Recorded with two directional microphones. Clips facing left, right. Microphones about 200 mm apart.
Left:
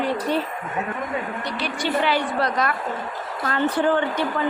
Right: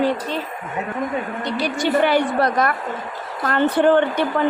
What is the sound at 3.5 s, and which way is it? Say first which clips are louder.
Speech: right 5 dB; 60° right (ahead or behind).